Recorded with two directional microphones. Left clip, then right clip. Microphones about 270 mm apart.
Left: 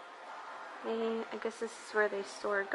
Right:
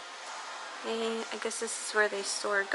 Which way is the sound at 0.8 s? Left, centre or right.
Centre.